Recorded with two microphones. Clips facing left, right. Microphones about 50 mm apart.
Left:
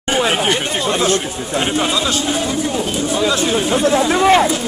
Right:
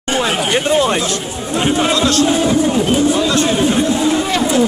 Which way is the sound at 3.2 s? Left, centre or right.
Centre.